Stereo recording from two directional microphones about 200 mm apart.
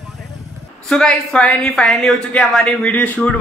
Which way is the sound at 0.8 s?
Centre (ahead or behind).